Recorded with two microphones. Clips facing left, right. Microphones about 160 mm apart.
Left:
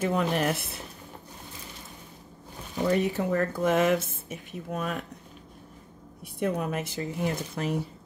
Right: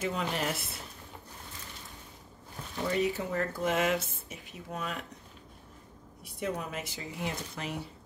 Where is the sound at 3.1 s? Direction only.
50° left (ahead or behind).